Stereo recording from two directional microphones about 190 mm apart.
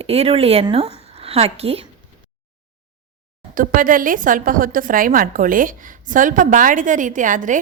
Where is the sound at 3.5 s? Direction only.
45° right (ahead or behind).